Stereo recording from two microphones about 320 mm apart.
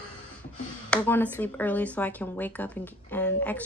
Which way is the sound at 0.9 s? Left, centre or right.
Centre.